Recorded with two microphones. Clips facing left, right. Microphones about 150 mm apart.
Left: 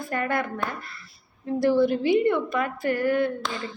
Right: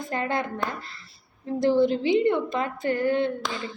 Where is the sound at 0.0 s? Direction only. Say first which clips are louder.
Left 1 dB; 20° right (ahead or behind).